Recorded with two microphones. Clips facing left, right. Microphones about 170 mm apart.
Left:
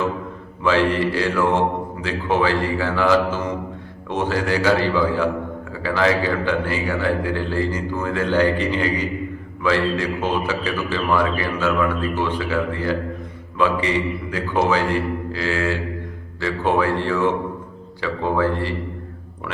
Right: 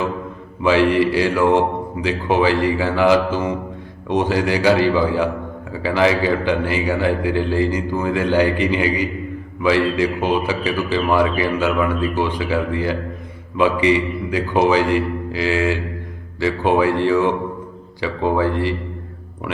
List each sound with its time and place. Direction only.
0.6 s a man's voice: 15° right (ahead or behind)